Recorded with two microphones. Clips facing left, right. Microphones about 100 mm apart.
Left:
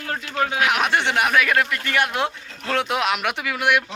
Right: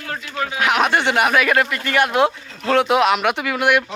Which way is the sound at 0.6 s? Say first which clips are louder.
Right 5 dB; centre (ahead or behind).